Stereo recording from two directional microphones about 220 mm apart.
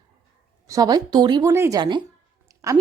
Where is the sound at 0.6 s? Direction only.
15° right (ahead or behind).